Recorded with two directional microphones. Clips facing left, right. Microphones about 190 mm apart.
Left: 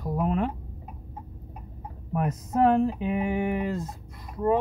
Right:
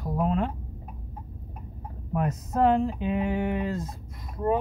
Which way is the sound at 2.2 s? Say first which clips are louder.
Left 1 dB; 5° left (ahead or behind).